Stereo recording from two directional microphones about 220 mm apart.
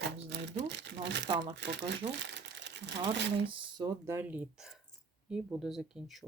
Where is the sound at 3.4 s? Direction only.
20° right (ahead or behind).